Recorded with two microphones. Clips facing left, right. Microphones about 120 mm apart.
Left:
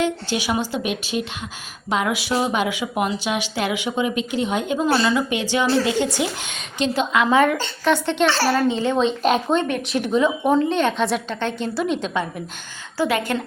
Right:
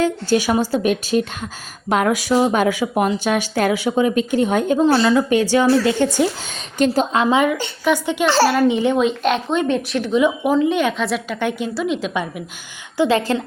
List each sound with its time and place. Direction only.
0.0 s a woman's voice: 40° right (ahead or behind)
4.8 s a woman's voice: 30° right (ahead or behind)
5.3 s a woman's voice: 40° right (ahead or behind)
7.3 s a woman's voice: 15° right (ahead or behind)
9.0 s a woman's voice: centre (ahead or behind)
13.0 s a woman's voice: 30° right (ahead or behind)